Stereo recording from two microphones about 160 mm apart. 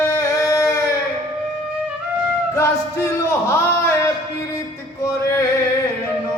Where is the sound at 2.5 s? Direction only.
15° left (ahead or behind).